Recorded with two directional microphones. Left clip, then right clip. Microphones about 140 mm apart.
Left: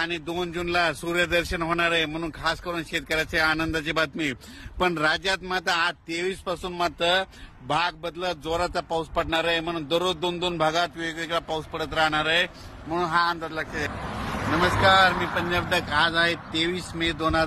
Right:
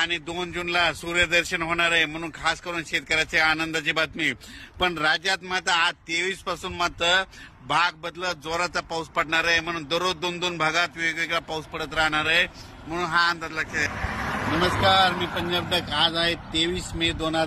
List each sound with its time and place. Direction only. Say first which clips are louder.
0.0 s speech: right 2 dB; 70° left (ahead or behind); by 8.4 s 50° left (ahead or behind)
8.5 s speech: left 1 dB; centre (ahead or behind)
9.1 s a man's voice: right 4 dB; 40° left (ahead or behind); by 12.4 s 20° left (ahead or behind)
12.9 s a man's voice: right 1 dB; 30° left (ahead or behind)
14.2 s vehicle: right 2 dB; 50° right (ahead or behind)
14.8 s speech: left 2 dB; 10° left (ahead or behind)
17.0 s speech: left 1 dB; 15° right (ahead or behind)